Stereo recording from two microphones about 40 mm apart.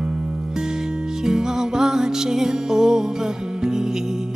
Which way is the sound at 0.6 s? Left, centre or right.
Centre.